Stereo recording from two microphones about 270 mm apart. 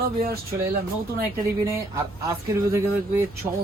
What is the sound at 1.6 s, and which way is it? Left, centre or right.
Speech, centre.